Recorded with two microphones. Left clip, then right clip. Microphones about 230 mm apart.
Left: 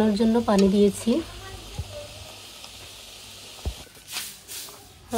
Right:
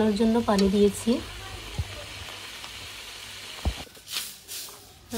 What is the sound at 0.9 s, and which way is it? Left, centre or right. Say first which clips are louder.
Sizzle: left 2 dB; centre.